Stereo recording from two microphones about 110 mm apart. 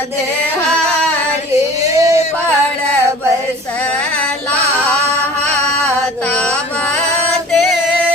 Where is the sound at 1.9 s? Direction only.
30° right (ahead or behind).